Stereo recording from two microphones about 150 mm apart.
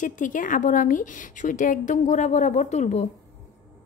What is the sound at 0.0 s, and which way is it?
A woman's voice, 60° left (ahead or behind).